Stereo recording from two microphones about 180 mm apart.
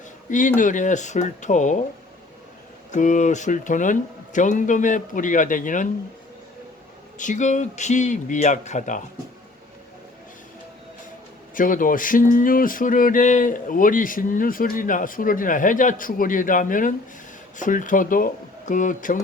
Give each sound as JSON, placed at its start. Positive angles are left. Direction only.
{"t": 0.3, "sound": "speech", "side_deg": 45}
{"t": 2.9, "sound": "speech", "side_deg": 45}
{"t": 7.2, "sound": "speech", "side_deg": 45}
{"t": 11.5, "sound": "speech", "side_deg": 50}